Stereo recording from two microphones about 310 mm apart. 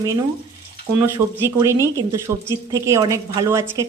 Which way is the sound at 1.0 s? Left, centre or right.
Centre.